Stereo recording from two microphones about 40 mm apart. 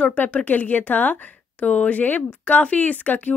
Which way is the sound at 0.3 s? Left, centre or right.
Left.